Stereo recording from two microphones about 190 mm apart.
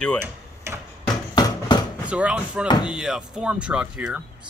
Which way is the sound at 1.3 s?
20° left (ahead or behind).